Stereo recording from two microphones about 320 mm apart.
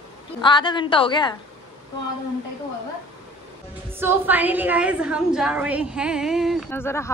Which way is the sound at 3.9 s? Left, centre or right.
Centre.